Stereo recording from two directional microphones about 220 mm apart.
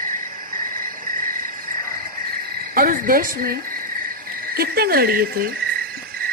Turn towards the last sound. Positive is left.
turn(degrees=-40)  # may be behind; listen again after turning